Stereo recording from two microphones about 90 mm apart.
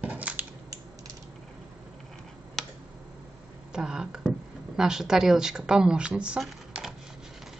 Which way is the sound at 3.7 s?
10° right (ahead or behind).